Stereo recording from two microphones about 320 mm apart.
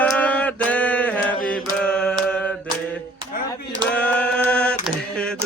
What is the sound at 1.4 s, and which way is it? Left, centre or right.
Mantra, centre.